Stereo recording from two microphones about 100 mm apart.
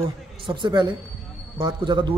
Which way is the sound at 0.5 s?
50° right (ahead or behind).